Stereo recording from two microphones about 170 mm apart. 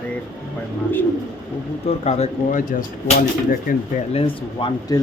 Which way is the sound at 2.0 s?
40° left (ahead or behind).